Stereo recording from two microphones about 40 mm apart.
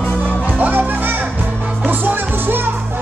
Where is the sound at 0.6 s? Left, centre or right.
Right.